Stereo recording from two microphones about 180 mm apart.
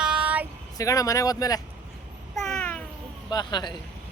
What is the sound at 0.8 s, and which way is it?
Speech, 20° left (ahead or behind).